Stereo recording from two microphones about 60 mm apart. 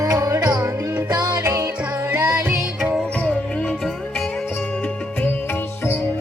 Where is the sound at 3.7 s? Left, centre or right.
Centre.